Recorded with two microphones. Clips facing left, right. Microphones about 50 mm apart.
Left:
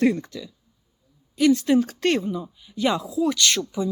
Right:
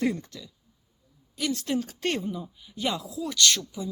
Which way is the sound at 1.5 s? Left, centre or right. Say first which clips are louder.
Left 9 dB; centre.